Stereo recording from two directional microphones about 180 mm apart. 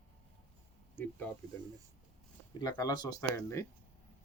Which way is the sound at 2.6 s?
20° left (ahead or behind).